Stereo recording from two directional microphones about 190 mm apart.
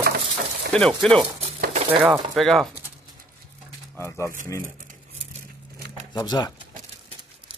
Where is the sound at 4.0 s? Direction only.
15° left (ahead or behind).